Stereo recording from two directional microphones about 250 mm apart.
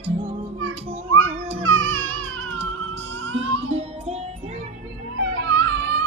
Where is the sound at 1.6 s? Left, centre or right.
Right.